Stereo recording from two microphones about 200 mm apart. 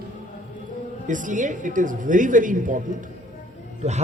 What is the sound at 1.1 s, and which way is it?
A man's voice, 40° right (ahead or behind).